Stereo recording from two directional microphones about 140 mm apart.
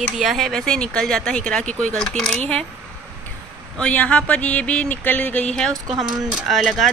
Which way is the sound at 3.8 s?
10° left (ahead or behind).